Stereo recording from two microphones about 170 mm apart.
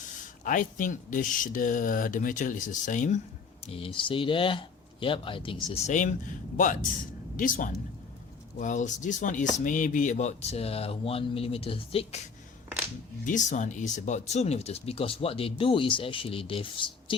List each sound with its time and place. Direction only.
0.4 s speech: 50° left (ahead or behind)
3.7 s speech: 35° left (ahead or behind)
7.3 s speech: 50° left (ahead or behind); by 17.2 s 30° left (ahead or behind)